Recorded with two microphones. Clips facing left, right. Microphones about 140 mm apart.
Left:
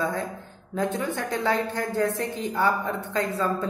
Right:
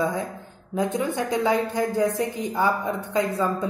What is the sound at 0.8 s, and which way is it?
A woman's voice, 15° right (ahead or behind).